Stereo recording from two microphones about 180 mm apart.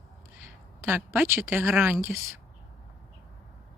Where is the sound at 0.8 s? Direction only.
10° right (ahead or behind).